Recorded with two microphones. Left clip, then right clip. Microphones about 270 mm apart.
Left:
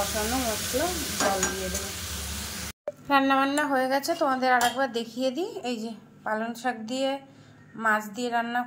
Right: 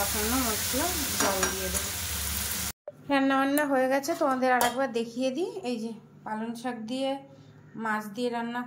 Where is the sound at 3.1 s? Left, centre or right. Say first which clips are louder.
Left 3 dB; centre.